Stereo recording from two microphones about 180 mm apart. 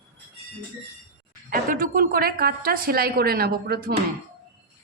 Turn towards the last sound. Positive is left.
turn(degrees=-60)  # may be behind; listen again after turning